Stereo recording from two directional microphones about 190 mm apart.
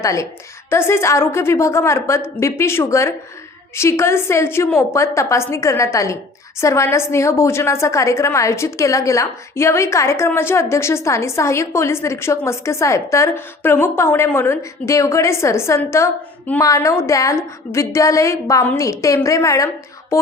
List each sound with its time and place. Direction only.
0.0 s a woman's voice: 15° left (ahead or behind)